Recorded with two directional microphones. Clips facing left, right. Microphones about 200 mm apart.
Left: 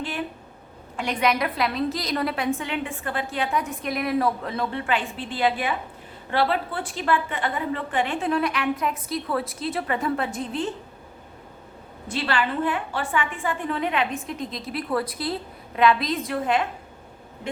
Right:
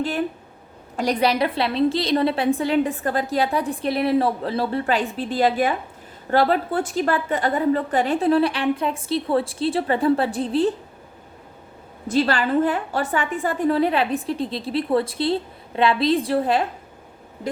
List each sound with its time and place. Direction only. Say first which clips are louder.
0.0 s a woman's voice: right 6 dB; 40° right (ahead or behind)
12.0 s a woman's voice: right 6 dB; 40° right (ahead or behind)